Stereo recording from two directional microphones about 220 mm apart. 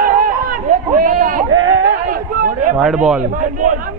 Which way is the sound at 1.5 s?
60° right (ahead or behind).